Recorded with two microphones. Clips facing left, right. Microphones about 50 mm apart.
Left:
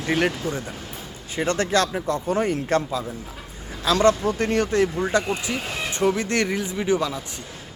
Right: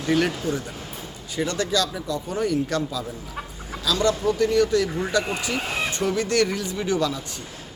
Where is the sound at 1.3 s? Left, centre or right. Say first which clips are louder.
Left 3 dB; left.